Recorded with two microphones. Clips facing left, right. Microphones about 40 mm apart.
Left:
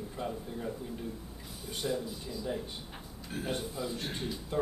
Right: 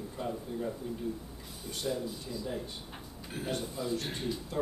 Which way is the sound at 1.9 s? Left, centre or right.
Centre.